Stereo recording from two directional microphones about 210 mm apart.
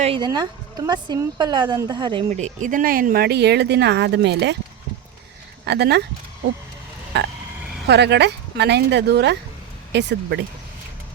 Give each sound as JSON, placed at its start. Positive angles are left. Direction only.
{"t": 0.0, "sound": "a woman's voice", "side_deg": -25}
{"t": 2.3, "sound": "speech", "side_deg": -35}
{"t": 5.6, "sound": "speech", "side_deg": -50}
{"t": 7.1, "sound": "speech", "side_deg": -55}